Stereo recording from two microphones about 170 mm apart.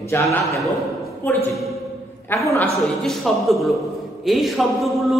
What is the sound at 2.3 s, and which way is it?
Speech, 15° left (ahead or behind).